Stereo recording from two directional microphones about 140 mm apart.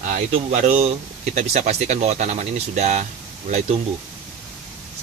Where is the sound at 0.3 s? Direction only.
55° right (ahead or behind).